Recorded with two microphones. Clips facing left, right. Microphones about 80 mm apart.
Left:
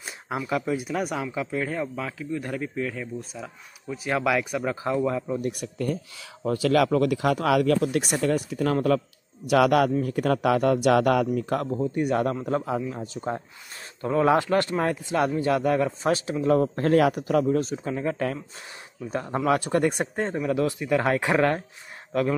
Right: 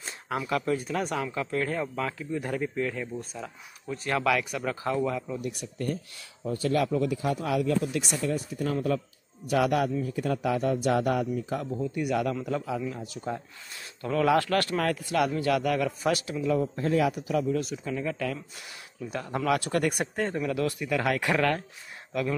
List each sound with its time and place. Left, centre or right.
0.5 s speech: centre
5.4 s a man's voice: left
6.4 s speech: left
10.0 s speech: left
11.7 s speech: left
14.0 s speech: left
16.4 s a man's voice: left
17.6 s speech: left